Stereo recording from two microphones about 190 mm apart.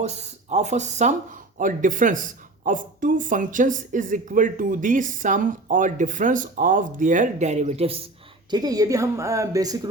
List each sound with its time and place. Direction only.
0.0 s speech: 35° right (ahead or behind)
8.4 s speech: 20° right (ahead or behind)